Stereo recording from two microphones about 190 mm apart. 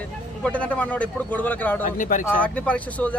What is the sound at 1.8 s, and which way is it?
Speech, 45° left (ahead or behind).